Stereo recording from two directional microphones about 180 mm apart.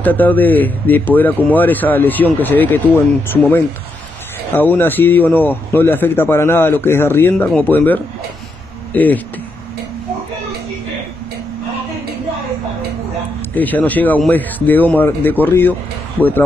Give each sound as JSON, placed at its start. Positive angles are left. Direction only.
{"t": 0.0, "sound": "speech", "side_deg": 10}
{"t": 4.6, "sound": "speech", "side_deg": 10}
{"t": 13.6, "sound": "speech", "side_deg": 10}